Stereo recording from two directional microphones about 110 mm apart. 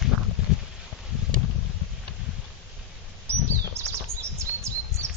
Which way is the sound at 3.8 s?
25° right (ahead or behind).